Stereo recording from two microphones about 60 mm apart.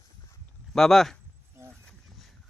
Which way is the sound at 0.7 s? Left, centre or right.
Centre.